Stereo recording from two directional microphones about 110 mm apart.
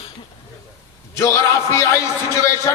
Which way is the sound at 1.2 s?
25° left (ahead or behind).